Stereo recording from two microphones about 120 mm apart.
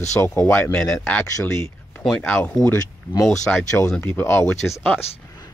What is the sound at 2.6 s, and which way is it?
Speech, 30° left (ahead or behind).